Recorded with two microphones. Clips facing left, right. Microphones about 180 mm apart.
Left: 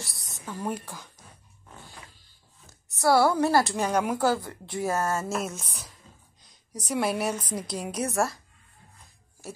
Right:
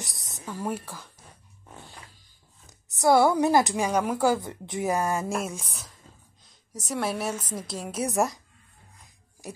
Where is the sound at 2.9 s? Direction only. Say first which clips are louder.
Right 2 dB; 20° right (ahead or behind); by 8.0 s centre (ahead or behind).